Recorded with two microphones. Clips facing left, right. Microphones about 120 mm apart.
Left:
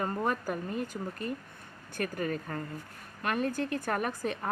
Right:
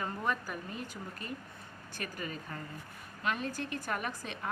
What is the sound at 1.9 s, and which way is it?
A woman's voice, 55° left (ahead or behind).